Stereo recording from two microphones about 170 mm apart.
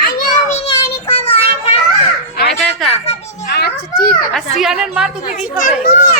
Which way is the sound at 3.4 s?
70° left (ahead or behind).